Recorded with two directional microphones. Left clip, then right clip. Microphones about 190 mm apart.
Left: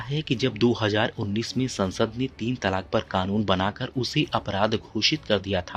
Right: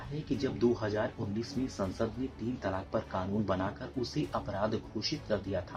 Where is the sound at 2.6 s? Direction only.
45° left (ahead or behind).